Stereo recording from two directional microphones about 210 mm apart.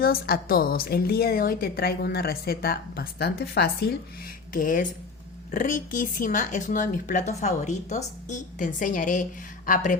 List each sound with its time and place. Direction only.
0.0 s a woman's voice: 45° left (ahead or behind)